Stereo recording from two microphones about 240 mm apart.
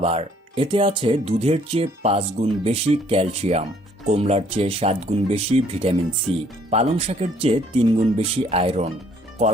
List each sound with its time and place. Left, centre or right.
0.0 s speech: right